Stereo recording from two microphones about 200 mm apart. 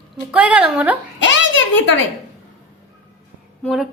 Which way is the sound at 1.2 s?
65° left (ahead or behind).